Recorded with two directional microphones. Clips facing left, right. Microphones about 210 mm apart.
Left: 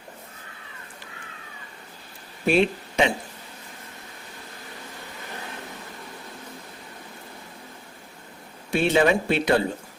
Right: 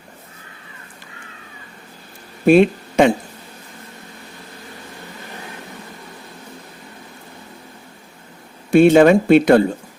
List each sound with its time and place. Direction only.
2.5 s speech: 50° right (ahead or behind)
8.7 s speech: 50° right (ahead or behind)